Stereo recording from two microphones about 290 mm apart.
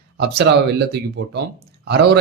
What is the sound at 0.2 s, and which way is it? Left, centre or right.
A man's voice, right.